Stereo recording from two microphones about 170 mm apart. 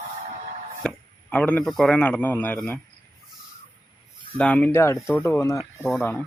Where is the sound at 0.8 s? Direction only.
5° left (ahead or behind).